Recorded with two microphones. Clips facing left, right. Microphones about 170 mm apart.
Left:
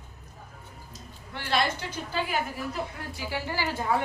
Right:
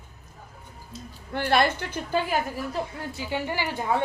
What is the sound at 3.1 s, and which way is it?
Speech, 20° right (ahead or behind).